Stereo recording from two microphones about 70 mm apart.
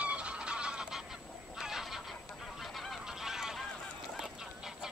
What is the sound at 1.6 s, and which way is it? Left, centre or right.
Fowl, centre.